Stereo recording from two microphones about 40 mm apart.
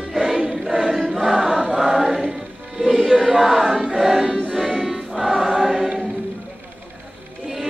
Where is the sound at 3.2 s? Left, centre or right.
Centre.